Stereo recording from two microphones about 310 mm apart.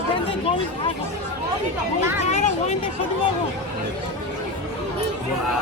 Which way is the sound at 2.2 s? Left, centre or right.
Left.